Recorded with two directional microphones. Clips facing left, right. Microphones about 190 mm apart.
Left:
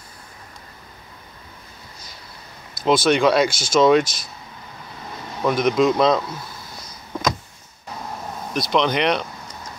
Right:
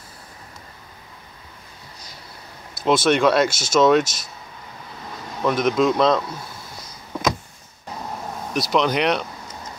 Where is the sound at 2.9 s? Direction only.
Centre (ahead or behind).